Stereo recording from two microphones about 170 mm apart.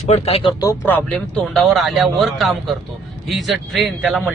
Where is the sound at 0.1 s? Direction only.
35° left (ahead or behind).